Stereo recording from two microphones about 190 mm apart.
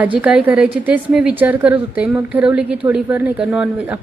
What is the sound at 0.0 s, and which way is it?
A woman's voice, 5° right (ahead or behind).